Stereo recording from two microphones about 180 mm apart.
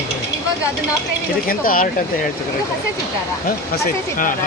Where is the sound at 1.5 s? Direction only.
50° left (ahead or behind).